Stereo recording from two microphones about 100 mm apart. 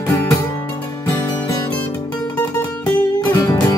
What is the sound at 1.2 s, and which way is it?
Music, 40° left (ahead or behind).